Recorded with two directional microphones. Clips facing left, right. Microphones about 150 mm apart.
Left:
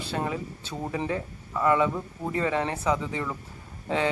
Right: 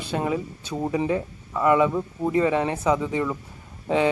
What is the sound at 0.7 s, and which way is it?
Speech, 25° right (ahead or behind).